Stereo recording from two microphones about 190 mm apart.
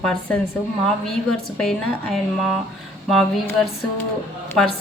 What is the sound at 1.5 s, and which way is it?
A woman's voice, 5° left (ahead or behind).